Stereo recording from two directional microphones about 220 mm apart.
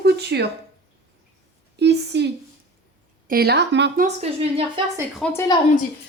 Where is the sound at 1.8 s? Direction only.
50° right (ahead or behind).